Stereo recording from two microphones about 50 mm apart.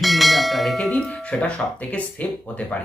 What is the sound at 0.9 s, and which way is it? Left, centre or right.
Speech, centre.